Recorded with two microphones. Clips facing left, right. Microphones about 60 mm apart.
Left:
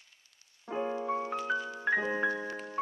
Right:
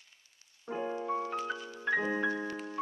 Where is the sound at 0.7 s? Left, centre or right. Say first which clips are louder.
Left 2 dB; left.